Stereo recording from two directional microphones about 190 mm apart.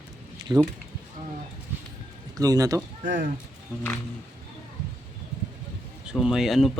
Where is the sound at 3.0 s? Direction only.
45° right (ahead or behind).